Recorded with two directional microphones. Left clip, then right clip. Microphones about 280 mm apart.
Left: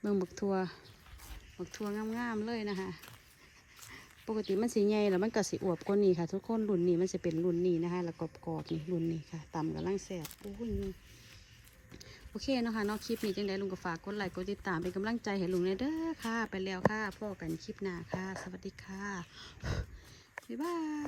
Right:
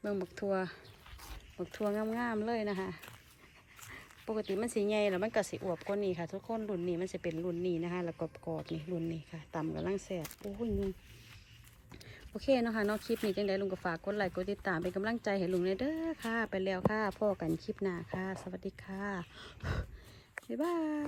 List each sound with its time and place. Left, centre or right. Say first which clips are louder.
0.0 s speech: left 2 dB; centre
3.9 s dog: even; centre
4.4 s speech: left 4 dB; centre
11.9 s a sound: right 1 dB; centre
13.1 s speech: right 2 dB; centre